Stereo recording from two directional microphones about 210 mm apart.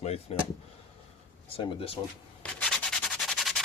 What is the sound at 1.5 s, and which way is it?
Speech, 25° left (ahead or behind).